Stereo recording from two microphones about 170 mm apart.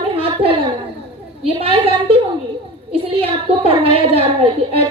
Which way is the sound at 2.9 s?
35° right (ahead or behind).